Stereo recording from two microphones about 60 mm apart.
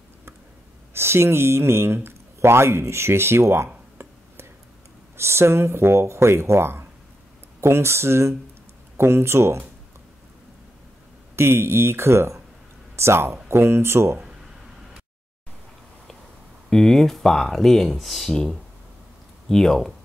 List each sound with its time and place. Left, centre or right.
0.9 s speech: right
2.0 s a sound: right
5.1 s speech: right
11.3 s speech: right
16.7 s speech: centre